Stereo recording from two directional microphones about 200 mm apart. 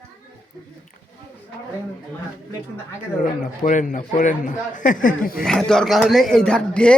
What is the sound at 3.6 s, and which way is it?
A man's voice, 40° left (ahead or behind).